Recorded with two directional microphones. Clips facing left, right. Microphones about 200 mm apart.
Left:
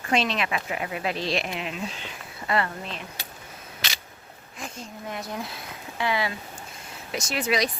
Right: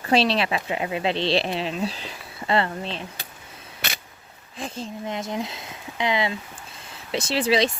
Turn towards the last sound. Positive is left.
turn(degrees=-30)  # may be behind; listen again after turning